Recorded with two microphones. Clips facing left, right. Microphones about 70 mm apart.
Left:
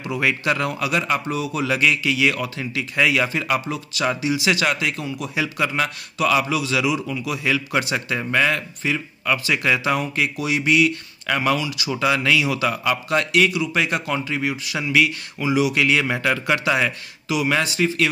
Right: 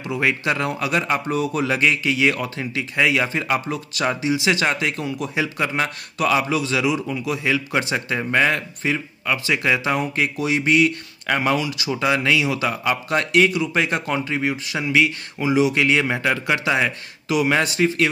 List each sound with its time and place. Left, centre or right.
0.1 s a man's voice: right
3.0 s a man's voice: right
4.1 s a man's voice: right
9.2 s a man's voice: centre
17.3 s a man's voice: right